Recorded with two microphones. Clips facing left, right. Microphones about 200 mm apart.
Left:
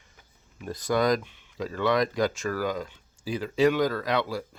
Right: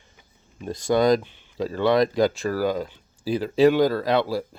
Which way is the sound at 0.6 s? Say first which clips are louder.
Right 5 dB; 25° right (ahead or behind).